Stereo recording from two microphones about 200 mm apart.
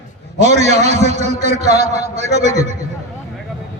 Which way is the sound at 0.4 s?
35° right (ahead or behind).